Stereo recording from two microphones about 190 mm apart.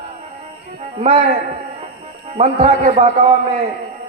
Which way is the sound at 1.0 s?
35° right (ahead or behind).